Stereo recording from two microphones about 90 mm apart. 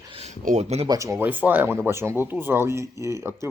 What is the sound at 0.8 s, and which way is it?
Speech, 40° right (ahead or behind).